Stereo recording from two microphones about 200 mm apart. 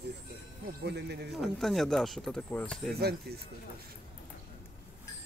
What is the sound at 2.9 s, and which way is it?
Speech, 55° right (ahead or behind).